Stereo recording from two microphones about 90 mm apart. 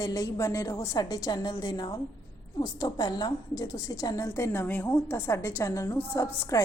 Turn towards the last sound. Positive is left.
turn(degrees=40)  # may be behind; listen again after turning